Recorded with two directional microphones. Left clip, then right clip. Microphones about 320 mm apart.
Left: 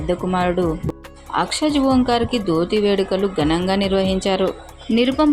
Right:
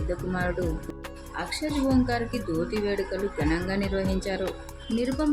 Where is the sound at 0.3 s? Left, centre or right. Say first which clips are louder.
Left 10 dB; centre.